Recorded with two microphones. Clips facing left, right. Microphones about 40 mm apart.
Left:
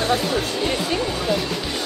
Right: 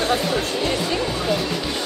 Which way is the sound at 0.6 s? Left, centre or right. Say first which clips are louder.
Even; centre.